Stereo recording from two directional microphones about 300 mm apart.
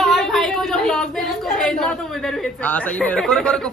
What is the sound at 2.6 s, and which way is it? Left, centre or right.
Speech, centre.